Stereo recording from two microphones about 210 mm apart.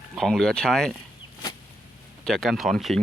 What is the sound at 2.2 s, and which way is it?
Speech, centre (ahead or behind).